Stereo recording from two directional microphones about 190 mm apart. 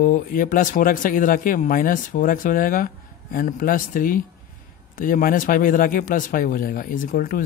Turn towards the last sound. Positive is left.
turn(degrees=45)  # may be behind; listen again after turning